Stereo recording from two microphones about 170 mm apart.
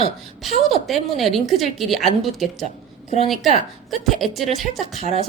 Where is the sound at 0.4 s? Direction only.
Centre (ahead or behind).